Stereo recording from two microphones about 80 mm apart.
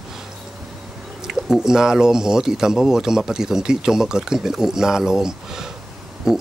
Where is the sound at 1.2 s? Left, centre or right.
Centre.